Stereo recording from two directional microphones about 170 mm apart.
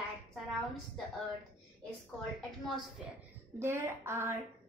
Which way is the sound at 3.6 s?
15° right (ahead or behind).